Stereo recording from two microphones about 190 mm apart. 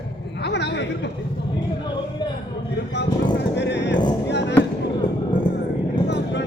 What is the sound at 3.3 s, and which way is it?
Horse, 65° left (ahead or behind).